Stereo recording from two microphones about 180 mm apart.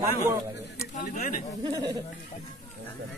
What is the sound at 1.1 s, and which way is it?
Speech, 50° left (ahead or behind).